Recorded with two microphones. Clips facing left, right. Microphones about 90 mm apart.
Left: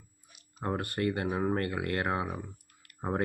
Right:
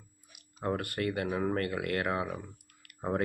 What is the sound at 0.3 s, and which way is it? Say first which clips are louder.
Speech: right 1 dB; 25° left (ahead or behind).